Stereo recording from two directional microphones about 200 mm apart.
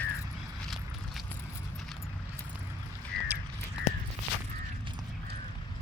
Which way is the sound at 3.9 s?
35° left (ahead or behind).